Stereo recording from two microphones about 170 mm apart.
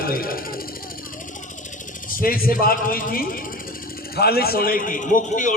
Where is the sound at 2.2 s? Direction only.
60° left (ahead or behind).